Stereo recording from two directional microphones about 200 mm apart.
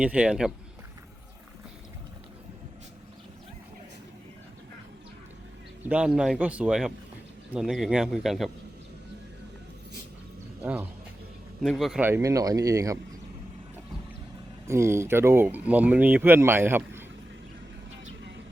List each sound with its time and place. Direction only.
0.0 s speech: 5° right (ahead or behind)
5.9 s speech: 5° right (ahead or behind)
10.6 s speech: 5° right (ahead or behind)
14.7 s speech: 15° right (ahead or behind)